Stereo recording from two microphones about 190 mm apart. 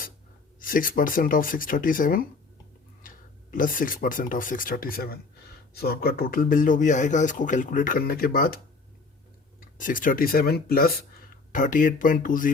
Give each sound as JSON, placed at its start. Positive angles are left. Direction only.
{"t": 0.6, "sound": "speech", "side_deg": 45}
{"t": 3.5, "sound": "speech", "side_deg": 45}
{"t": 9.6, "sound": "speech", "side_deg": 45}
{"t": 11.5, "sound": "speech", "side_deg": 45}